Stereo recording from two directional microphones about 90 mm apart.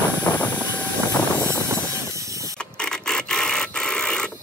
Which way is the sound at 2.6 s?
10° left (ahead or behind).